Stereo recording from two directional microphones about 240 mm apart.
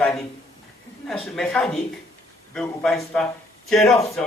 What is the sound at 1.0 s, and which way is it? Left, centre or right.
A woman's voice, centre.